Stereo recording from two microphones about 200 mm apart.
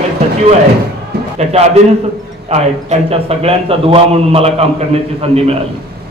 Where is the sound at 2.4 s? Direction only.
35° right (ahead or behind).